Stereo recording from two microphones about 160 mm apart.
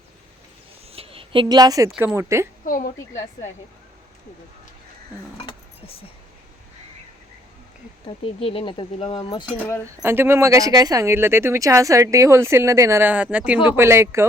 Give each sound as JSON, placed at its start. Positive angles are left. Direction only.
{"t": 0.9, "sound": "a sound", "side_deg": -35}
{"t": 2.0, "sound": "speech", "side_deg": -15}
{"t": 2.6, "sound": "a woman's voice", "side_deg": 60}
{"t": 8.0, "sound": "speech", "side_deg": 35}
{"t": 10.0, "sound": "speech", "side_deg": -15}